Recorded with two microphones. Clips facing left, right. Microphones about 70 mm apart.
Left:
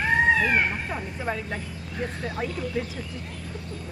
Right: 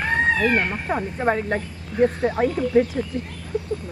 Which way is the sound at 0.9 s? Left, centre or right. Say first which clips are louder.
Right 8 dB; right.